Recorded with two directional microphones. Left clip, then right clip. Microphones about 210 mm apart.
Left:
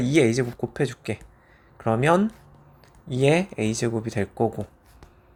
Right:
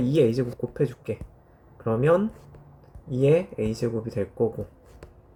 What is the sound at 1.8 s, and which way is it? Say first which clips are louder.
Speech: left 1 dB; 20° left (ahead or behind).